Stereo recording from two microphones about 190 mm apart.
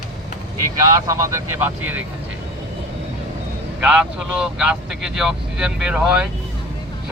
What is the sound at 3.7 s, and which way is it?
Speech, 5° right (ahead or behind).